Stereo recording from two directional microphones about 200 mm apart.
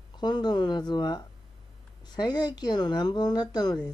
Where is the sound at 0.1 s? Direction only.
20° left (ahead or behind).